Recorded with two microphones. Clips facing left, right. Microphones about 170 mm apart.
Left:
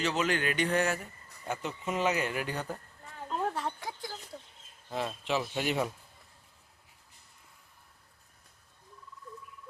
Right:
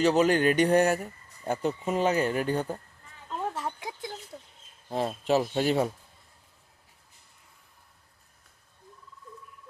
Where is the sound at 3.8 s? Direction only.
20° right (ahead or behind).